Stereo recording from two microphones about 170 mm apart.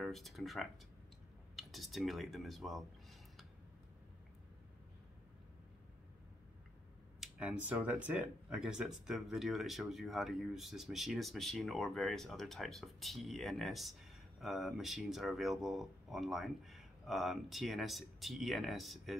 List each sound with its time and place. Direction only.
0.0 s speech: centre (ahead or behind)
7.2 s speech: 5° right (ahead or behind)